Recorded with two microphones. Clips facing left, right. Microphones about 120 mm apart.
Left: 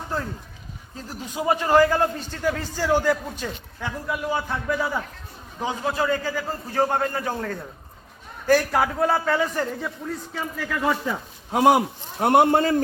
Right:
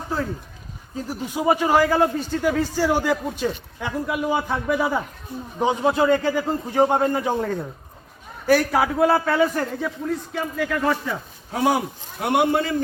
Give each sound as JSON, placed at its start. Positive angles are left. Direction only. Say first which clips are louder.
{"t": 1.0, "sound": "a man's voice", "louder": "right 3 dB", "side_deg": -10}
{"t": 11.5, "sound": "speech", "louder": "left 4 dB", "side_deg": 20}
{"t": 12.2, "sound": "a man's voice", "louder": "left 3 dB", "side_deg": 45}